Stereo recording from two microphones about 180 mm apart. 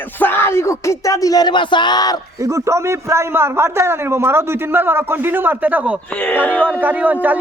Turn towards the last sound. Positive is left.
turn(degrees=-10)  # may be behind; listen again after turning